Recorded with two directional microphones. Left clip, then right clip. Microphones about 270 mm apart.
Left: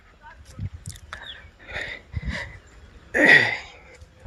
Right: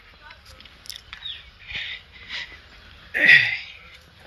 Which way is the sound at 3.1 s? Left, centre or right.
Left.